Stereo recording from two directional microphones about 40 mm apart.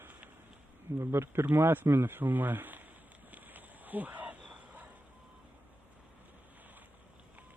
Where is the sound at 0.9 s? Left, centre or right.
Right.